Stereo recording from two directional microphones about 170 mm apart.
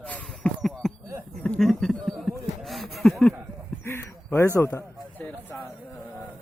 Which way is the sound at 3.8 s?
15° left (ahead or behind).